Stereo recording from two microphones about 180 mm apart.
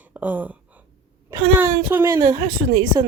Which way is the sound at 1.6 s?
10° right (ahead or behind).